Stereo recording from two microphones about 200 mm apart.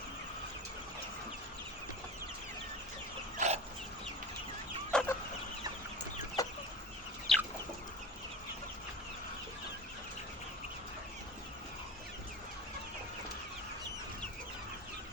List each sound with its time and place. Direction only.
3.3 s dog: 35° right (ahead or behind)
4.9 s chicken: 5° left (ahead or behind)
6.4 s chicken: 15° left (ahead or behind)
7.3 s chicken: centre (ahead or behind)